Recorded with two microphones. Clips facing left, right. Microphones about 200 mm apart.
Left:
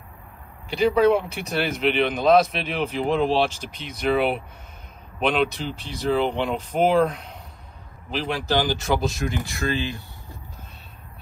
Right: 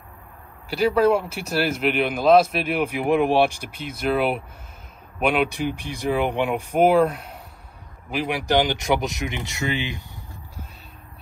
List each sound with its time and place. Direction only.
0.7 s speech: 5° right (ahead or behind)